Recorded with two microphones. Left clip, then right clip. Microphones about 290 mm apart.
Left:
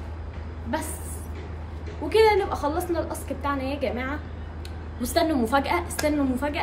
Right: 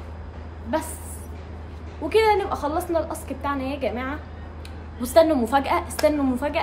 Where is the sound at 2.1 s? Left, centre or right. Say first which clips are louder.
Even; centre.